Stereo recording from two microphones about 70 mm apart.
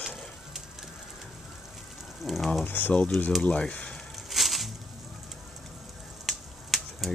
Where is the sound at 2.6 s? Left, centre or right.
Left.